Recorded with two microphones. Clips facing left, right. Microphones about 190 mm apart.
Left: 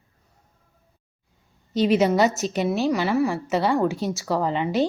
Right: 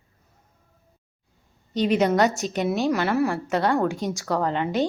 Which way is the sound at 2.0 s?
5° left (ahead or behind).